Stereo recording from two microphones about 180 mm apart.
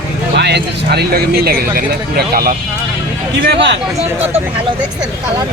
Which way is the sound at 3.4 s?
70° right (ahead or behind).